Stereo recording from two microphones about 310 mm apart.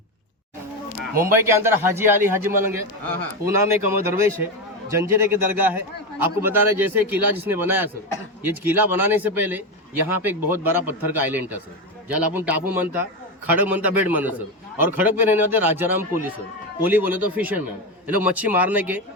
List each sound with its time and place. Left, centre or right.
1.2 s a man's voice: centre
3.8 s a man's voice: centre